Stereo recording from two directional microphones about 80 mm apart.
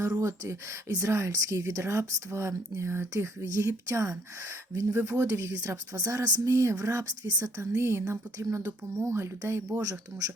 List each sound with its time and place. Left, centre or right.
0.0 s speech: right
6.4 s speech: right
9.8 s speech: right